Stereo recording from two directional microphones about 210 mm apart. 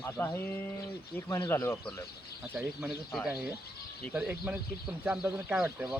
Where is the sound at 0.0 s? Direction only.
10° left (ahead or behind).